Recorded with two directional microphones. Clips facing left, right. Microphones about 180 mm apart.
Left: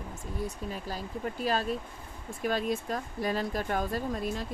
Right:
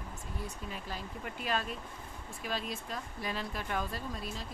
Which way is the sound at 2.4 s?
50° left (ahead or behind).